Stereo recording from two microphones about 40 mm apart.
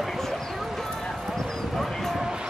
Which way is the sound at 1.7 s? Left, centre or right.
Centre.